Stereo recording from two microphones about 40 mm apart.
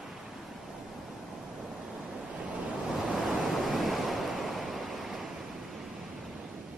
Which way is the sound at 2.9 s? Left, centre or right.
Centre.